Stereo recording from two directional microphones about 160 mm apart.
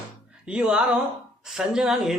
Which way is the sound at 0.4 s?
5° right (ahead or behind).